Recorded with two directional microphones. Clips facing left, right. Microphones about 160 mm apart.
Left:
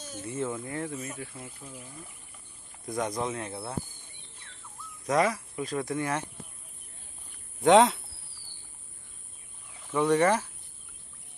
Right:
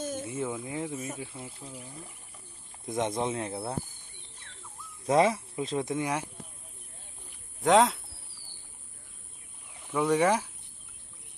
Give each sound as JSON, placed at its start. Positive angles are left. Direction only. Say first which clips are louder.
{"t": 0.0, "sound": "a sound", "louder": "right 8 dB", "side_deg": -50}
{"t": 0.3, "sound": "speech", "louder": "left 1 dB", "side_deg": -10}
{"t": 2.8, "sound": "speech", "louder": "right 1 dB", "side_deg": -25}
{"t": 5.0, "sound": "speech", "louder": "right 2 dB", "side_deg": -25}
{"t": 7.6, "sound": "speech", "louder": "left 3 dB", "side_deg": 0}
{"t": 9.8, "sound": "speech", "louder": "left 1 dB", "side_deg": -10}